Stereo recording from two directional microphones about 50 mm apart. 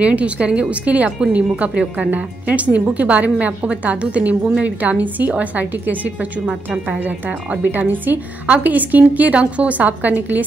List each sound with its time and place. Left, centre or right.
0.0 s a woman's voice: right